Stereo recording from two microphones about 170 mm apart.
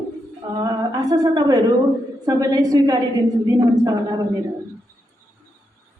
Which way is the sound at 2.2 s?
20° right (ahead or behind).